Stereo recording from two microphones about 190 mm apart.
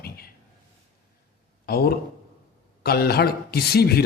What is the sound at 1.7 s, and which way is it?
A man's voice, 55° left (ahead or behind).